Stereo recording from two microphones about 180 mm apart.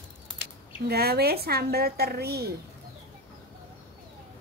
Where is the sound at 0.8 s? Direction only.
60° right (ahead or behind).